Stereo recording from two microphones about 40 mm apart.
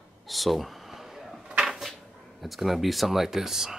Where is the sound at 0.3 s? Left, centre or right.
Centre.